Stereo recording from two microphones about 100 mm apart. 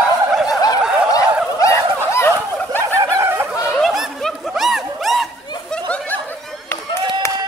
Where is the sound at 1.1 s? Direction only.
35° left (ahead or behind).